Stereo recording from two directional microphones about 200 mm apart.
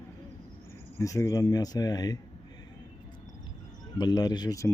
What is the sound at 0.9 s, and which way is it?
Speech, 15° left (ahead or behind).